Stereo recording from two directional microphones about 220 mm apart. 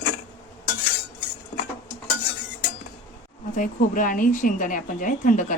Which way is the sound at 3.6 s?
40° left (ahead or behind).